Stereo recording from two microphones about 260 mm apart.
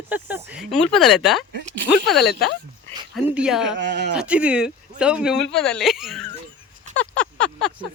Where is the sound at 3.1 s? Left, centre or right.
Centre.